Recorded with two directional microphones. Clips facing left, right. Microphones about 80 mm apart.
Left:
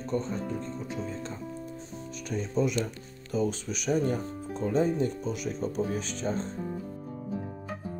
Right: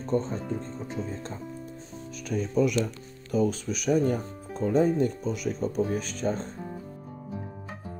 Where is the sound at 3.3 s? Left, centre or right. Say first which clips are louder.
Right 3 dB; right.